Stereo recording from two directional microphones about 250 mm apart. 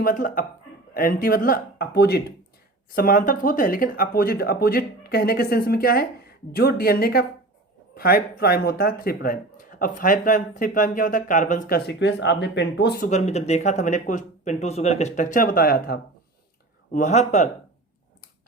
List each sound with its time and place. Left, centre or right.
0.0 s speech: left
13.1 s speech: left